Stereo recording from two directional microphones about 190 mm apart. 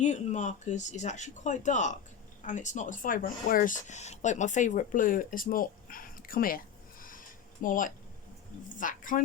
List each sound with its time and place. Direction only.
0.0 s speech: 40° left (ahead or behind)
7.6 s speech: 45° left (ahead or behind)